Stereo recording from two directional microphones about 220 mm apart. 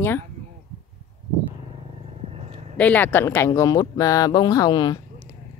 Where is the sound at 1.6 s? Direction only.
25° right (ahead or behind).